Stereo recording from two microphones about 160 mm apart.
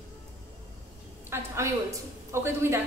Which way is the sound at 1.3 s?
15° right (ahead or behind).